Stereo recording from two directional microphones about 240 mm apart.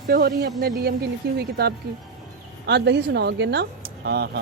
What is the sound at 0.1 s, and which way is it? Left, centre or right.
Speech, right.